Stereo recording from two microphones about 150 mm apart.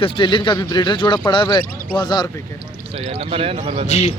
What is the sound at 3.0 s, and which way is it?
Speech, 40° right (ahead or behind).